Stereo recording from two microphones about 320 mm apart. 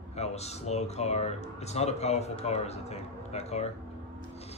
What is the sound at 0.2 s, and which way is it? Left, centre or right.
Speech, centre.